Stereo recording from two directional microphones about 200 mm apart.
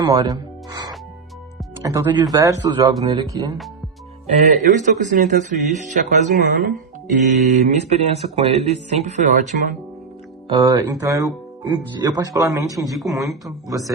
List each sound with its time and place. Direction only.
0.0 s speech: 20° right (ahead or behind)
1.8 s speech: 15° right (ahead or behind)
4.6 s speech: 40° right (ahead or behind)
10.5 s speech: 15° right (ahead or behind)
12.9 s speech: centre (ahead or behind)
13.4 s speech: 15° right (ahead or behind)